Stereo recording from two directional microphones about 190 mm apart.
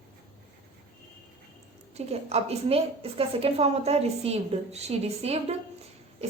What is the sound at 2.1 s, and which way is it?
A woman's voice, 35° right (ahead or behind).